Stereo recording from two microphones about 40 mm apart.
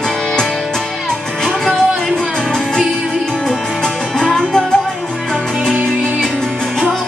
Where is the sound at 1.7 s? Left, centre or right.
Centre.